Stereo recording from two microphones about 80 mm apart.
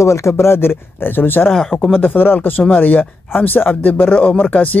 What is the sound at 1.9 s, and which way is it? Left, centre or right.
Speech, left.